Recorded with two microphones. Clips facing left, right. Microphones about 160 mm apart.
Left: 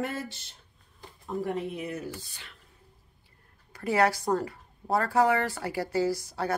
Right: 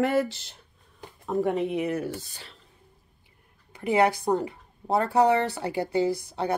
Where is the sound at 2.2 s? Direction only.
35° right (ahead or behind).